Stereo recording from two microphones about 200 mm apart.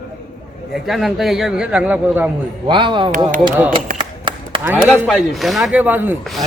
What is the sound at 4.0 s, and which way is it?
Clapping, 25° right (ahead or behind).